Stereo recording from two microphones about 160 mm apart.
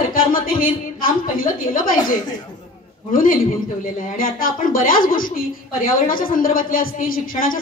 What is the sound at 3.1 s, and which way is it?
A woman's voice, 60° left (ahead or behind).